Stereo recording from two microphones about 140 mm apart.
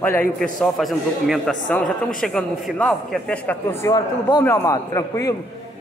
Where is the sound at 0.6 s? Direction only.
Centre (ahead or behind); by 5.3 s 25° left (ahead or behind).